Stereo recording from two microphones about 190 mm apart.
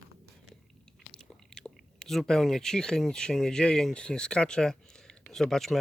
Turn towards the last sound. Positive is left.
turn(degrees=0)  # may be behind; listen again after turning